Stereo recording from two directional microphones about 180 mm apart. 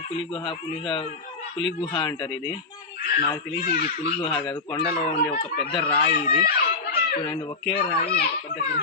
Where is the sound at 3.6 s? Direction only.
55° left (ahead or behind).